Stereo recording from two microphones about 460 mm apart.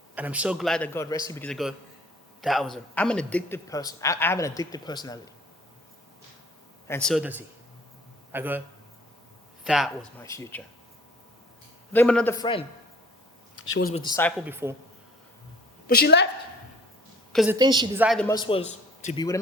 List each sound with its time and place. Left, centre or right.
0.2 s a man's voice: centre
6.8 s a man's voice: centre
9.6 s a man's voice: centre
11.9 s a man's voice: centre
13.7 s a man's voice: left; by 14.8 s centre
15.9 s a woman's voice: left
17.3 s a man's voice: centre